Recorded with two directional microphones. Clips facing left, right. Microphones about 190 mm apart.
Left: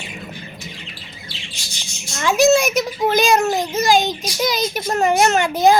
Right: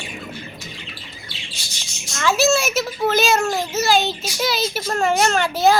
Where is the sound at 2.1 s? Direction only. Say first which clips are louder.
Left 4 dB; 15° left (ahead or behind).